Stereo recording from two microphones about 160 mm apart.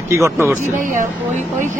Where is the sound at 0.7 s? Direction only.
50° right (ahead or behind).